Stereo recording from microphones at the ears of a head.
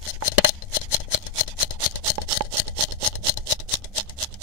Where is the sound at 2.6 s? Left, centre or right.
Left.